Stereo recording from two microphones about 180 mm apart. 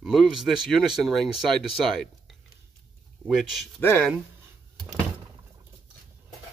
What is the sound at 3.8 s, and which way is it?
Speech, 10° left (ahead or behind).